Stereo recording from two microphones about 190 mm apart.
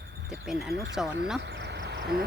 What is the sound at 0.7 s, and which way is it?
Speech, 65° right (ahead or behind).